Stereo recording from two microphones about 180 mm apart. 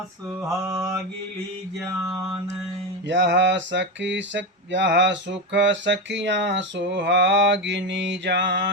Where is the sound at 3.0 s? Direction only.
80° right.